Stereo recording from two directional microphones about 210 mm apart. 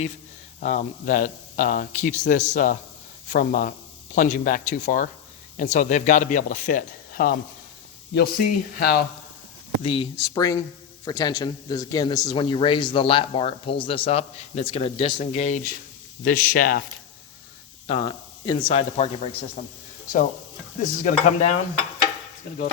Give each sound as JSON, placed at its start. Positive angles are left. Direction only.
{"t": 0.6, "sound": "speech", "side_deg": 35}
{"t": 9.8, "sound": "a man's voice", "side_deg": 25}
{"t": 17.8, "sound": "a man's voice", "side_deg": 25}
{"t": 20.8, "sound": "speech", "side_deg": 40}